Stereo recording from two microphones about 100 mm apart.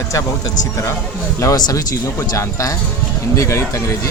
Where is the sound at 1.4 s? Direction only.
35° left (ahead or behind).